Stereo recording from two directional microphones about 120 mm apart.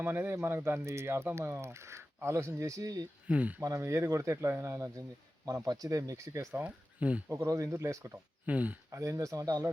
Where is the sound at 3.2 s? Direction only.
10° right (ahead or behind).